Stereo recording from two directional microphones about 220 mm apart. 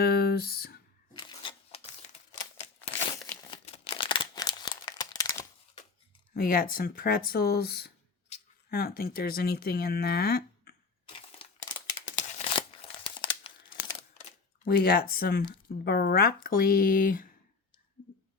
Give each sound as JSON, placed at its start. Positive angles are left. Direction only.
{"t": 0.0, "sound": "a sound", "side_deg": 45}
{"t": 1.2, "sound": "a sound", "side_deg": 20}
{"t": 3.1, "sound": "crumpling", "side_deg": 15}
{"t": 6.3, "sound": "speech", "side_deg": 40}
{"t": 12.3, "sound": "crumpling", "side_deg": 25}
{"t": 14.7, "sound": "speech", "side_deg": 45}